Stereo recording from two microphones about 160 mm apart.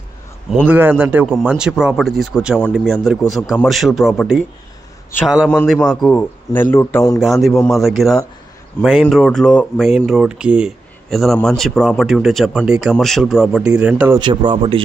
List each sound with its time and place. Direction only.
0.7 s a man's voice: 10° right (ahead or behind); by 7.0 s 15° left (ahead or behind)
7.2 s speech: centre (ahead or behind)
8.8 s a man's voice: 15° left (ahead or behind); by 14.2 s 10° right (ahead or behind)
14.2 s speech: 30° right (ahead or behind)